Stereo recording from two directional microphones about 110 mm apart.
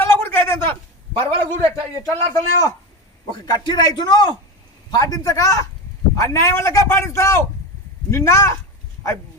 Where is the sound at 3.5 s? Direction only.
40° left (ahead or behind).